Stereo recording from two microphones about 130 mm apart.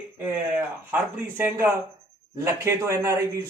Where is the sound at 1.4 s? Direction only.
15° right (ahead or behind).